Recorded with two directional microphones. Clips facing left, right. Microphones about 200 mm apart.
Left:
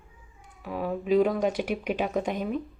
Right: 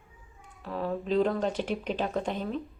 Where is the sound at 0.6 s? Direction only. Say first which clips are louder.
Left 2 dB; 10° left (ahead or behind).